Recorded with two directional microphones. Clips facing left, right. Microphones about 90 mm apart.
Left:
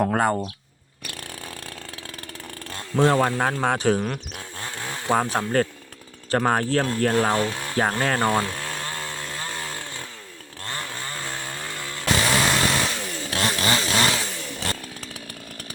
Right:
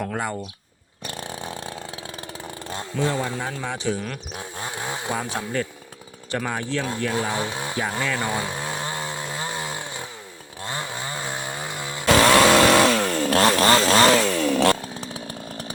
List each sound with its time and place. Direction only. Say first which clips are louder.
0.1 s speech: left 6 dB; 45° left (ahead or behind)
1.0 s vehicle: right 5 dB; 25° right (ahead or behind)
3.0 s speech: left 6 dB; 65° left (ahead or behind)
4.4 s chainsaw: right 3 dB; 15° right (ahead or behind)
5.3 s speech: left 5 dB; 50° left (ahead or behind)
7.3 s speech: left 2 dB; 15° right (ahead or behind)
7.8 s speech: left 5 dB; 55° left (ahead or behind)
8.3 s chainsaw: left 3 dB; 15° right (ahead or behind)
12.1 s chainsaw: right 8 dB; 90° right; by 13.5 s 55° right (ahead or behind)
13.6 s chainsaw: right 4 dB; 45° right (ahead or behind)
14.2 s chainsaw: right 12 dB; 90° right
14.8 s chainsaw: right 5 dB; 25° right (ahead or behind)